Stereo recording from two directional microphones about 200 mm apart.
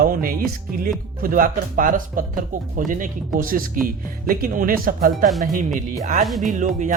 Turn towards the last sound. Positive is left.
turn(degrees=-40)  # may be behind; listen again after turning